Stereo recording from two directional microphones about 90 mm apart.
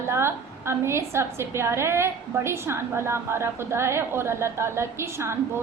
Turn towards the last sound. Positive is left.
turn(degrees=-30)  # may be behind; listen again after turning